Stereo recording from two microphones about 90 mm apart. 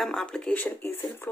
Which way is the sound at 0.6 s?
20° left (ahead or behind).